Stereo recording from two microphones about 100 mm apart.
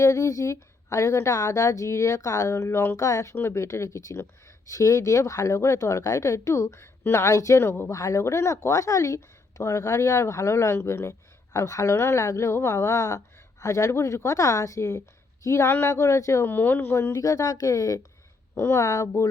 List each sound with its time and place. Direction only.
0.0 s speech: 35° left (ahead or behind)
16.5 s speech: 20° left (ahead or behind)